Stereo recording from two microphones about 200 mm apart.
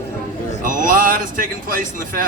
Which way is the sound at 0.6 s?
45° right (ahead or behind).